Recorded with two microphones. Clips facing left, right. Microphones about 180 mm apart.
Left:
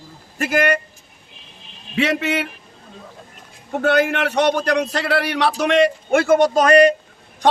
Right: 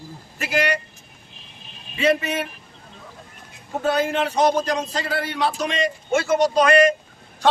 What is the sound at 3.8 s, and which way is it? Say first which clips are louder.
Speech: left 3 dB; 70° left (ahead or behind).